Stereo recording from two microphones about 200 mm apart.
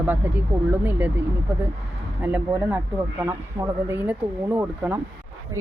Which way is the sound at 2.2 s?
10° right (ahead or behind).